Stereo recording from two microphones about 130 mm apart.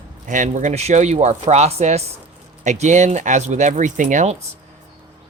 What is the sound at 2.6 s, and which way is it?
Speech, 65° right (ahead or behind).